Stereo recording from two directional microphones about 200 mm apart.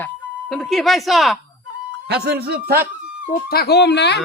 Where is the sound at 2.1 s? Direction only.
55° right (ahead or behind).